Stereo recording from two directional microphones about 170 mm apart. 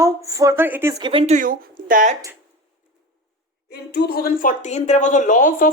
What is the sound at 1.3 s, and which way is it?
Speech, 55° right (ahead or behind).